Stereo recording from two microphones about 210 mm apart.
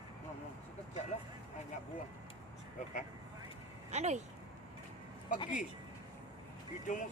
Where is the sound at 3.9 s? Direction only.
30° right (ahead or behind).